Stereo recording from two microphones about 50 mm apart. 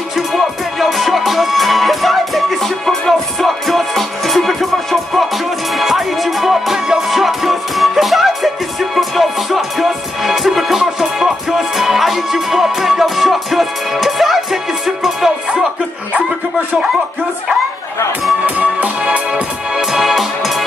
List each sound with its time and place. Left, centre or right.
0.1 s music: centre
5.7 s music: centre
18.9 s music: right
19.7 s music: centre